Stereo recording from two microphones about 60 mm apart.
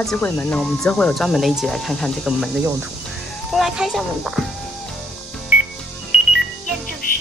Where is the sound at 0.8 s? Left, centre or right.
Centre.